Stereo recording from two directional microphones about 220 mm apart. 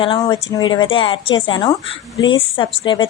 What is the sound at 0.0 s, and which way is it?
A woman's voice, 20° left (ahead or behind).